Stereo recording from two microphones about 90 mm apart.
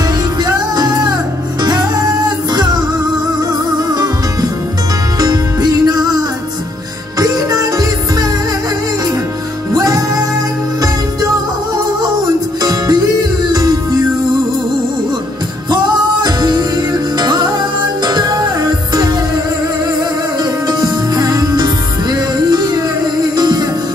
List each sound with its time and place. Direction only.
0.4 s music: 50° right (ahead or behind)
9.8 s music: 45° right (ahead or behind)
15.7 s music: 50° right (ahead or behind)
20.6 s music: 50° right (ahead or behind)